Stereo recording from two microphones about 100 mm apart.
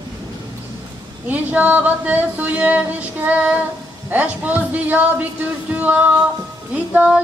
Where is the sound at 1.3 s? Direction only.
15° right (ahead or behind).